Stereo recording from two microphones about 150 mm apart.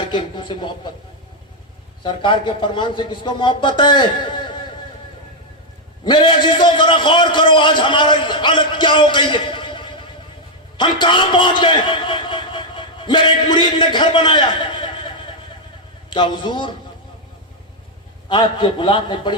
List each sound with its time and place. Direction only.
0.1 s speech: 30° left (ahead or behind)
2.0 s a man's voice: 30° left (ahead or behind)
6.1 s a man's voice: 30° left (ahead or behind)
18.3 s a man's voice: 30° left (ahead or behind)